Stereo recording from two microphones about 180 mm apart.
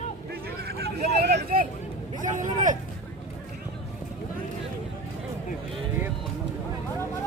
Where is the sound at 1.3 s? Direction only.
50° right (ahead or behind).